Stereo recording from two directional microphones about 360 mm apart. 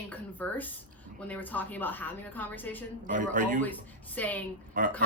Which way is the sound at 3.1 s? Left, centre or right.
Right.